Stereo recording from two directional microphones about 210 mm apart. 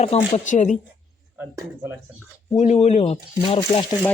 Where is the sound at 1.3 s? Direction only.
10° right (ahead or behind).